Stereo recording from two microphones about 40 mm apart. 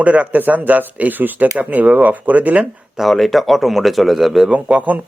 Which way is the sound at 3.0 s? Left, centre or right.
Centre.